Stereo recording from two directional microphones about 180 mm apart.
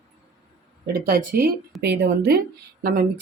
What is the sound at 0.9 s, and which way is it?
Speech, 55° right (ahead or behind).